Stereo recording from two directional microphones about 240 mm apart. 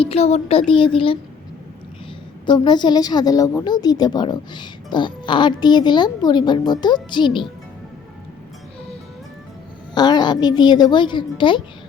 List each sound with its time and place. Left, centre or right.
0.0 s speech: left
2.5 s a woman's voice: centre
9.9 s a woman's voice: centre